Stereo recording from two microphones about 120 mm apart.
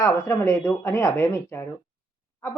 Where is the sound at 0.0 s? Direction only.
25° left (ahead or behind).